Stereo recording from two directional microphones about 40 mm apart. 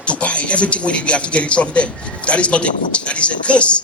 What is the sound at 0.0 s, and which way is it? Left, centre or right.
A man's voice, left.